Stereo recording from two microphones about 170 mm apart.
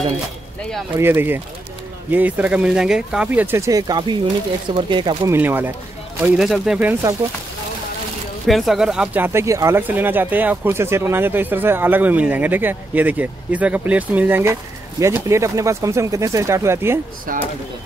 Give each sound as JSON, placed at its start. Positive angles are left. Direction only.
{"t": 0.9, "sound": "speech", "side_deg": -15}
{"t": 5.3, "sound": "speech", "side_deg": -10}
{"t": 8.5, "sound": "speech", "side_deg": 0}
{"t": 17.3, "sound": "speech", "side_deg": -55}